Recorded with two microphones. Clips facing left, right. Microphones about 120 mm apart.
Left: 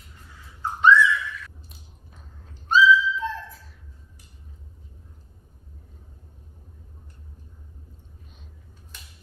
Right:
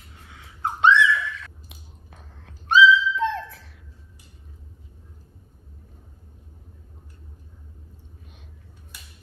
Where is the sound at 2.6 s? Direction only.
80° right.